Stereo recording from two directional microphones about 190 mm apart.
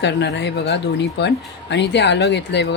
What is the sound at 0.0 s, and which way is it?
Speech, 65° left (ahead or behind).